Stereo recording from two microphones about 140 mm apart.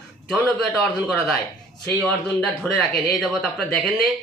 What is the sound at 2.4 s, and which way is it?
Speech, 5° left (ahead or behind).